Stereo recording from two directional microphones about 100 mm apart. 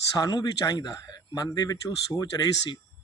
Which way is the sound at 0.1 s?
40° left (ahead or behind).